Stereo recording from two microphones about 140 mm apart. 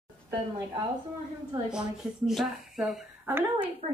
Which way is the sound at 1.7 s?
5° right (ahead or behind).